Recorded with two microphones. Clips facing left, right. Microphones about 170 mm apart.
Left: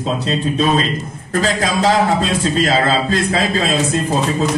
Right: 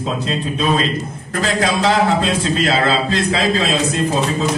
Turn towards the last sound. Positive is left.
turn(degrees=50)  # may be behind; listen again after turning